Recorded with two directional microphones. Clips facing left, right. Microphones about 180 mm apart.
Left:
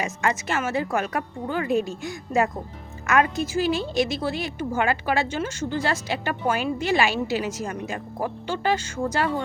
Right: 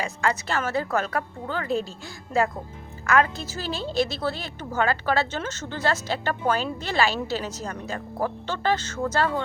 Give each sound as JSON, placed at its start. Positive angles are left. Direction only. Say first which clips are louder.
{"t": 0.0, "sound": "a woman's voice", "louder": "left 1 dB", "side_deg": 20}